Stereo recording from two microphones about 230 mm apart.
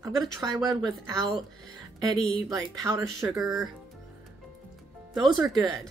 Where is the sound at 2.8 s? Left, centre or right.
Centre.